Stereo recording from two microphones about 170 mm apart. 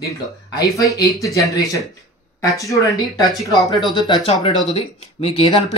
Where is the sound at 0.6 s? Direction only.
20° left (ahead or behind).